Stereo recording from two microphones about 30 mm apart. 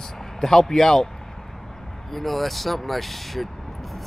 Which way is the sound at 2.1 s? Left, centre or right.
Centre.